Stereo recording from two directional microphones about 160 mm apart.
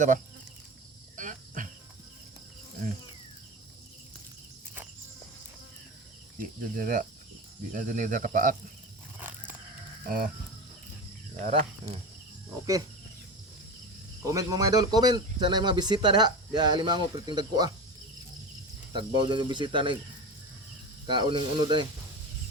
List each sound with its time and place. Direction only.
1.1 s cricket: 55° right (ahead or behind)
6.4 s speech: 60° right (ahead or behind)
10.1 s speech: 60° right (ahead or behind)
14.2 s speech: 20° right (ahead or behind)
18.9 s speech: 30° right (ahead or behind)
21.1 s speech: 30° right (ahead or behind)